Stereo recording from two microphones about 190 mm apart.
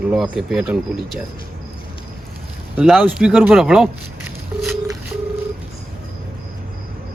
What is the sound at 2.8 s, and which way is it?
Speech, centre (ahead or behind).